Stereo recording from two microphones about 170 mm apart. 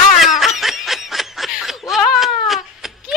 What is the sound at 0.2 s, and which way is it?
Snicker, centre (ahead or behind).